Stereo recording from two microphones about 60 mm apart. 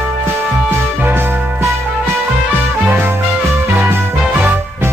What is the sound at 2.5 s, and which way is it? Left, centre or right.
Music, right.